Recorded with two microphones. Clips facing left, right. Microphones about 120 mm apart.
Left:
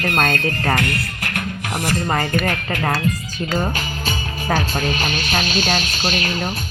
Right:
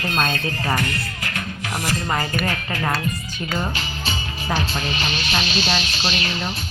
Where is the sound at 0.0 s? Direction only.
55° left (ahead or behind).